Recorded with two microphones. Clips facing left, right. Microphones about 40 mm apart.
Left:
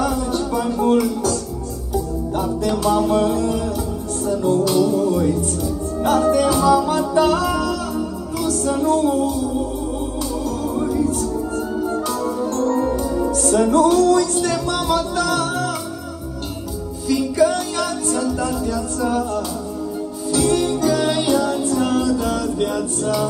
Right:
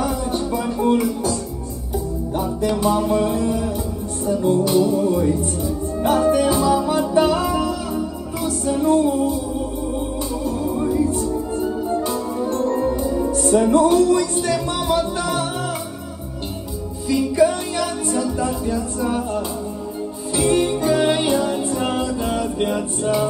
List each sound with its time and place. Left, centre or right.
0.0 s music: right
2.7 s music: right
8.6 s music: right
10.9 s music: right
17.1 s music: right
20.2 s music: centre